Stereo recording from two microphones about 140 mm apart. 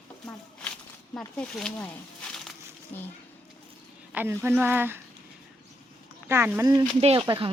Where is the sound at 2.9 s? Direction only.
15° left (ahead or behind).